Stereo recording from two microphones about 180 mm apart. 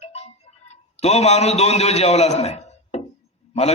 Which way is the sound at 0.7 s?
35° left (ahead or behind).